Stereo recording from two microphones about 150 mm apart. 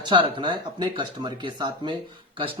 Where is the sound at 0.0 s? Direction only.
30° right (ahead or behind).